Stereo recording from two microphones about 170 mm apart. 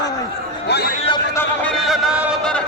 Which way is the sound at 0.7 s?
70° left (ahead or behind).